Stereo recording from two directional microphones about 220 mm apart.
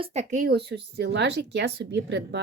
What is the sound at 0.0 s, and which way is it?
Speech, 30° right (ahead or behind).